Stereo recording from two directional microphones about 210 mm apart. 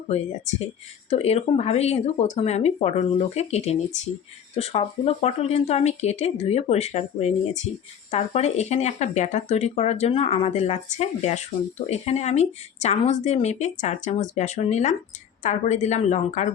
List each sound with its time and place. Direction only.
1.1 s speech: 30° left (ahead or behind)